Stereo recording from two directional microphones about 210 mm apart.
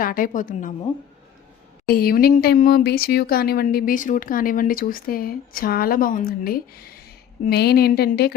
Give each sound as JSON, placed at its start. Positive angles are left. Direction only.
{"t": 0.0, "sound": "a woman's voice", "side_deg": 40}
{"t": 1.9, "sound": "speech", "side_deg": 45}